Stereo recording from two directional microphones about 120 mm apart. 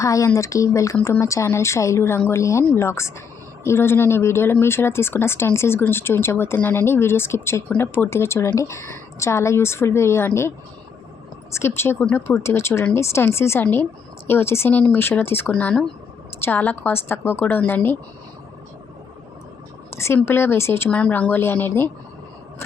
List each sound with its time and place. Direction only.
0.0 s speech: 25° left (ahead or behind)
11.5 s speech: 20° left (ahead or behind)
20.0 s speech: 20° left (ahead or behind)